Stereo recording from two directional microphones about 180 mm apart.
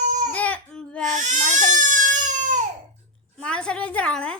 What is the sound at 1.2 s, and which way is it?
Baby cry, 45° right (ahead or behind).